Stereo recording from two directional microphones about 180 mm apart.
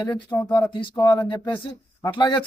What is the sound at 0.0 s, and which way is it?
Speech, 25° left (ahead or behind).